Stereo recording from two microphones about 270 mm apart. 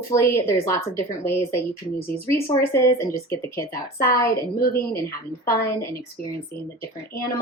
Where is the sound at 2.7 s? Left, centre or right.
Centre.